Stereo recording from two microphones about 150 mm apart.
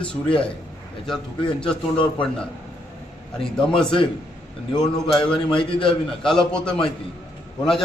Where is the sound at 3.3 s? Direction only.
5° left (ahead or behind).